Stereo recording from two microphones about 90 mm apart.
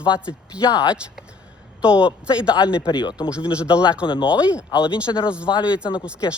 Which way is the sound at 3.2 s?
10° right (ahead or behind).